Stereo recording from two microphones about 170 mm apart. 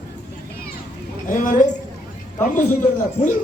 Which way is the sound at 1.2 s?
50° left (ahead or behind).